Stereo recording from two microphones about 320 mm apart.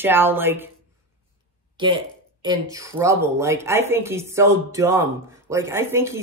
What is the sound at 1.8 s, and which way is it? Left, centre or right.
Speech, centre.